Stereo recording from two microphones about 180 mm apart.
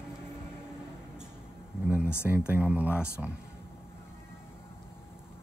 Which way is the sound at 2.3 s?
10° right (ahead or behind).